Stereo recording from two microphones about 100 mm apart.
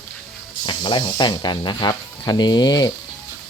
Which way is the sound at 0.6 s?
50° left (ahead or behind).